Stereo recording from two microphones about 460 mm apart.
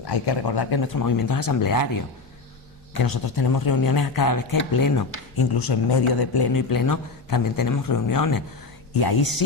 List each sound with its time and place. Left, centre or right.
0.0 s speech: left
8.9 s speech: left